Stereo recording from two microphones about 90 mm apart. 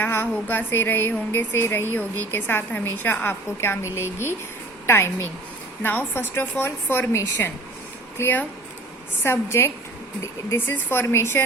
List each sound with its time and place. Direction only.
0.0 s a woman's voice: 25° left (ahead or behind)
8.2 s a woman's voice: 20° left (ahead or behind)